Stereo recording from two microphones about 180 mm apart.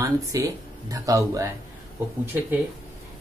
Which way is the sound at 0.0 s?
20° right (ahead or behind).